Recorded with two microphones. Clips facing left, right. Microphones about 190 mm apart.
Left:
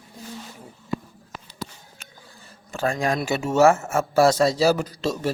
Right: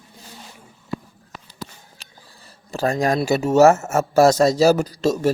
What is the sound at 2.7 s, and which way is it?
A man's voice, 40° right (ahead or behind).